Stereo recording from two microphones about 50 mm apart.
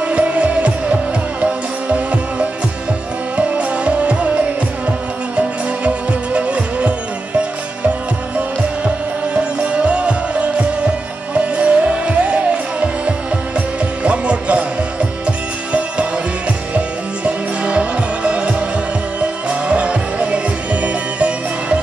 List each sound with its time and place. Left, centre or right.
0.0 s music: right
9.3 s music: right
19.7 s music: right